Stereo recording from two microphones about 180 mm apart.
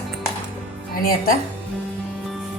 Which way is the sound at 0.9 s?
55° left (ahead or behind).